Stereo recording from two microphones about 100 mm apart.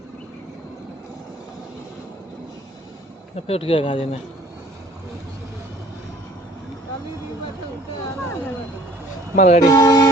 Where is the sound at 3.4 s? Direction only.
80° left; by 4.1 s 65° left (ahead or behind).